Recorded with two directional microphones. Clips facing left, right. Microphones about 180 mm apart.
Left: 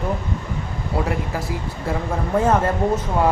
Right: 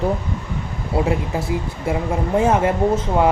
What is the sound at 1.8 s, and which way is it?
Speech, 15° right (ahead or behind).